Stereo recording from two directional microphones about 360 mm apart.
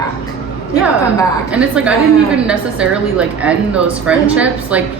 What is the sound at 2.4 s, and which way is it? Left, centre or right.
A woman's voice, centre.